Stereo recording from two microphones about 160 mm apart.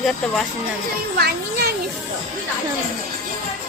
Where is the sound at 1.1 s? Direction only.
80° right.